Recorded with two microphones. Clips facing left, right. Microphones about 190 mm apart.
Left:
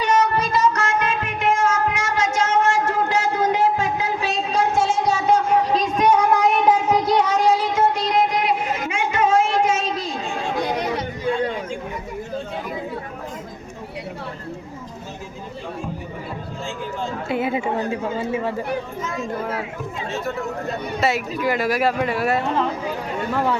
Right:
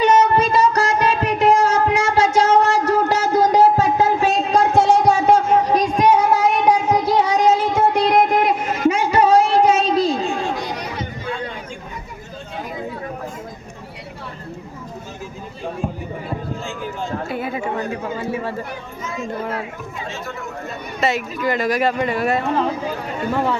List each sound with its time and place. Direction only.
0.0 s music: 20° right (ahead or behind); by 5.3 s 60° right (ahead or behind)
5.3 s a sound: 20° right (ahead or behind); by 6.7 s centre (ahead or behind)
7.1 s child singing: 10° right (ahead or behind)
7.7 s music: 60° right (ahead or behind); by 10.2 s 35° right (ahead or behind)
10.6 s chatter: 55° left (ahead or behind)
17.2 s a sound: 25° left (ahead or behind)
21.0 s speech: 5° left (ahead or behind)